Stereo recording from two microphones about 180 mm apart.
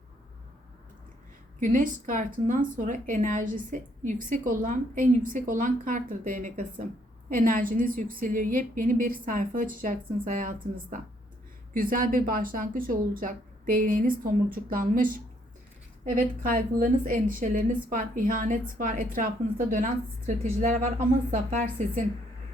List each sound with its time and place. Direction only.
1.5 s a woman's voice: 45° right (ahead or behind)
11.7 s a woman's voice: 50° right (ahead or behind)